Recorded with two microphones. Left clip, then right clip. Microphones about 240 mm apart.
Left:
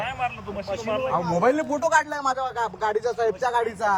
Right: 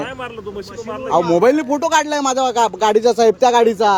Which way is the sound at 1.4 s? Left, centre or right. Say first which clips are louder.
Right 7 dB; right.